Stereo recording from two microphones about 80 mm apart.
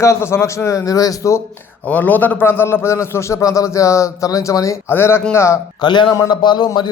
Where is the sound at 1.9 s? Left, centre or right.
Left.